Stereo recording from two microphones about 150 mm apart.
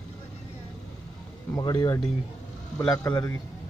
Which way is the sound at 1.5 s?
25° left (ahead or behind).